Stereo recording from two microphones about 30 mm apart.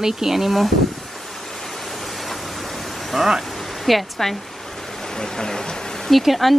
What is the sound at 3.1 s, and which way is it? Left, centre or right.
Speech, centre.